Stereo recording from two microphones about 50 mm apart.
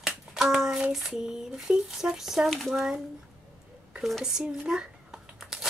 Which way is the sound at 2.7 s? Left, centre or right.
Centre.